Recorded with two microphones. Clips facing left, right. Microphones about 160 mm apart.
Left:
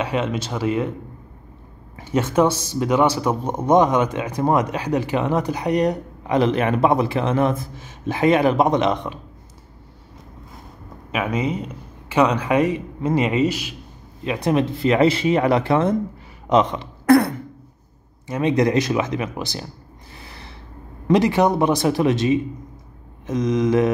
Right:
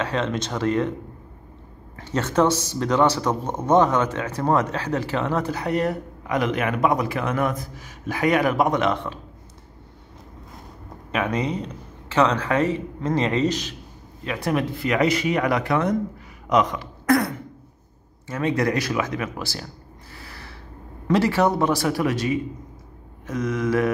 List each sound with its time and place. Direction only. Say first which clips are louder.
0.0 s speech: left 2 dB; 10° left (ahead or behind)
2.0 s speech: left 3 dB; 10° left (ahead or behind)
11.1 s speech: left 1 dB; 5° left (ahead or behind)
14.2 s speech: left 4 dB; 20° left (ahead or behind)
18.2 s speech: left 4 dB; 20° left (ahead or behind)
20.2 s snort: left 1 dB; 20° left (ahead or behind)
21.1 s speech: left 3 dB; 15° left (ahead or behind)